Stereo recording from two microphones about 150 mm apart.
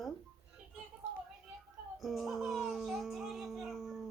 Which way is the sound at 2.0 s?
Centre (ahead or behind).